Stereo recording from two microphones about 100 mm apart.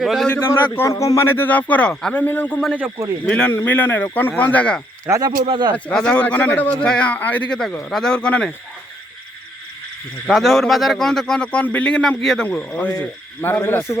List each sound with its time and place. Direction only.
0.0 s speech: centre (ahead or behind)
0.9 s a man's voice: 30° left (ahead or behind); by 2.2 s 10° left (ahead or behind)
2.2 s a man's voice: 20° left (ahead or behind)
5.1 s speech: 25° right (ahead or behind)
5.5 s speech: 50° right (ahead or behind)
5.7 s a man's voice: 10° left (ahead or behind)
10.2 s speech: centre (ahead or behind); by 14.0 s 25° left (ahead or behind)